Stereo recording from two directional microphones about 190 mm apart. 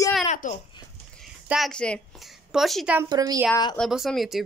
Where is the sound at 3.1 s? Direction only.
20° right (ahead or behind).